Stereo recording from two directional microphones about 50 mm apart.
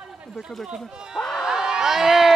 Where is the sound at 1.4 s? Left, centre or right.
Centre.